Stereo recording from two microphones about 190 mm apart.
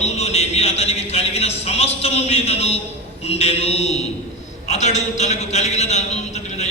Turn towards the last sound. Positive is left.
turn(degrees=35)  # may be behind; listen again after turning